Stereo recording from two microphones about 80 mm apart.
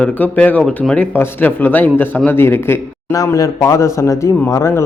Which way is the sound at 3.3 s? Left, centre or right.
Left.